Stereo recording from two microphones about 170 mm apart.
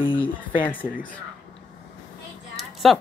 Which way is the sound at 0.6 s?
10° left (ahead or behind).